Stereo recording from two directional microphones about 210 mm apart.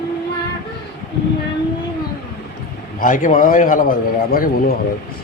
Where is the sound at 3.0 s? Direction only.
40° left (ahead or behind).